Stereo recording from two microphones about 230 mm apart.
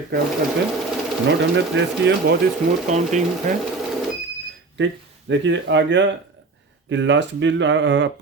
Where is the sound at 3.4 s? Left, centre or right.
Right.